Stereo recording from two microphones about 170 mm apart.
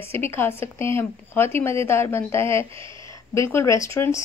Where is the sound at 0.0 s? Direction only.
15° left (ahead or behind).